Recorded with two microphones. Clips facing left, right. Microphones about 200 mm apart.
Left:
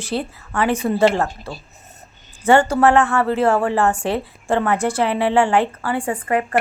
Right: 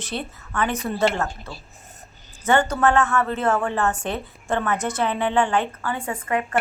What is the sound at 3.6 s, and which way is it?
Speech, 90° left.